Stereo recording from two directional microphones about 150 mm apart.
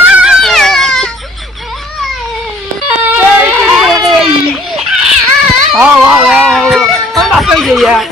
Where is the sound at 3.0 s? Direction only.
5° right (ahead or behind).